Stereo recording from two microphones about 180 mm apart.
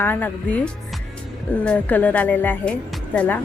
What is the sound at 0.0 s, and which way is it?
Speech, 10° left (ahead or behind).